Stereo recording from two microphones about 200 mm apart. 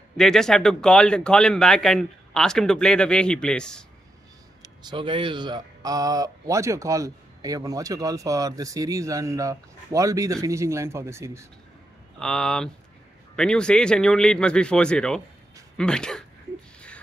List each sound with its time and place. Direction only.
0.2 s speech: 5° left (ahead or behind)
4.8 s speech: 25° right (ahead or behind)
12.2 s speech: 5° left (ahead or behind)